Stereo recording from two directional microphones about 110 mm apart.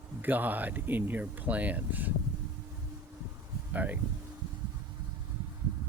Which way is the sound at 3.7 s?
15° right (ahead or behind).